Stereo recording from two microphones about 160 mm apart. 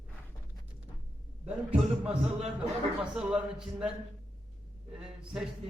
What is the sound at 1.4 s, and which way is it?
A man's voice, 5° right (ahead or behind).